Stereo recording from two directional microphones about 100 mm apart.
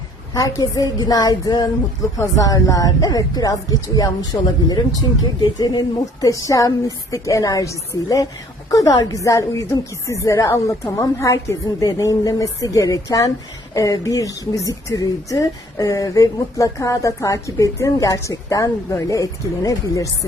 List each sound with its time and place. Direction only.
0.3 s speech: 35° left (ahead or behind)